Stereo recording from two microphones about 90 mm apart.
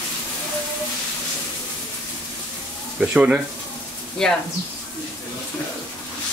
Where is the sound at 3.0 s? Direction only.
10° right (ahead or behind).